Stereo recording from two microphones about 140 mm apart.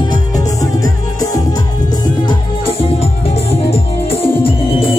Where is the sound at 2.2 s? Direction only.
40° left (ahead or behind).